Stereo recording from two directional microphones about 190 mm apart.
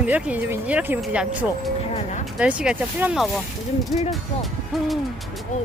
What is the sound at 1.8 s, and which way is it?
Speech, 35° left (ahead or behind).